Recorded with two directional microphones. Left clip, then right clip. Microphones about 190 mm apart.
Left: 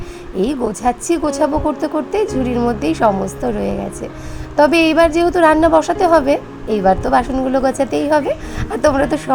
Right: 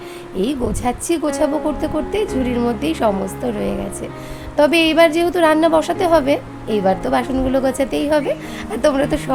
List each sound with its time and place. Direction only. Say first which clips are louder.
0.3 s a woman's voice: left 3 dB; 5° left (ahead or behind)